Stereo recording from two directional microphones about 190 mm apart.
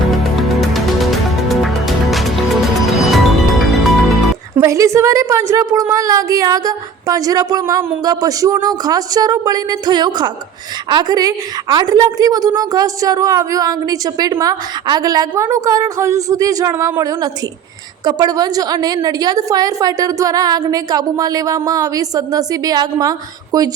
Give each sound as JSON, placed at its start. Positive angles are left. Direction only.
{"t": 0.1, "sound": "music", "side_deg": 0}
{"t": 4.5, "sound": "a woman's voice", "side_deg": -15}